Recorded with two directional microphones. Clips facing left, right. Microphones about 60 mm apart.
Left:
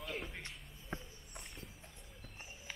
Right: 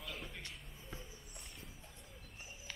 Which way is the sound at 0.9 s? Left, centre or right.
Left.